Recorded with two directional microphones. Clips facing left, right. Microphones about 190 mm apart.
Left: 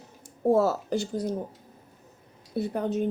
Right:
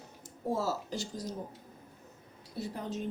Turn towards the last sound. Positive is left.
turn(degrees=60)  # may be behind; listen again after turning